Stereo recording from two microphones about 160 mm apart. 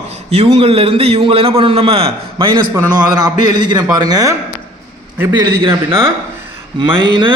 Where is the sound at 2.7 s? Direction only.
25° right (ahead or behind).